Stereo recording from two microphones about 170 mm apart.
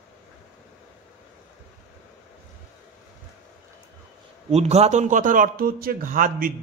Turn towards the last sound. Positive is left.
turn(degrees=-50)  # may be behind; listen again after turning